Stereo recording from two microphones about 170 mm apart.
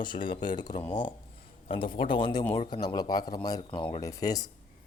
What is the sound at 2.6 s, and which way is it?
A man's voice, 25° left (ahead or behind).